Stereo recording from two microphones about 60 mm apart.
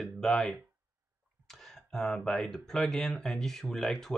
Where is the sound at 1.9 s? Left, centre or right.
Centre.